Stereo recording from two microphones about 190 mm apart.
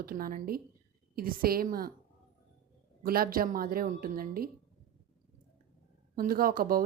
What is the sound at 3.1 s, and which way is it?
A woman's voice, 50° right (ahead or behind).